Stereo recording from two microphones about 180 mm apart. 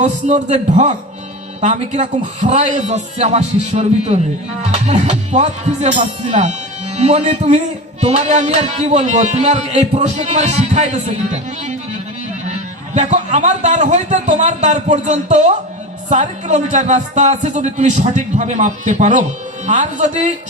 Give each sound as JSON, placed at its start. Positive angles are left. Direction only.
{"t": 0.0, "sound": "music", "side_deg": -40}
{"t": 19.6, "sound": "speech", "side_deg": -45}